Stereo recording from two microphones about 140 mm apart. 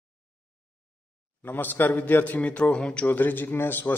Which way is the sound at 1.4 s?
15° left (ahead or behind).